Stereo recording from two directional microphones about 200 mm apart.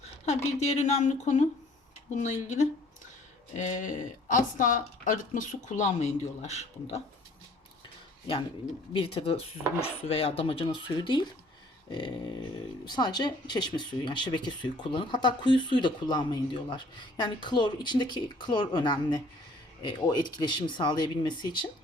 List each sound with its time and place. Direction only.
0.3 s speech: 35° left (ahead or behind)
8.9 s speech: 30° left (ahead or behind)
11.9 s a sound: 25° left (ahead or behind)
12.8 s speech: 20° left (ahead or behind)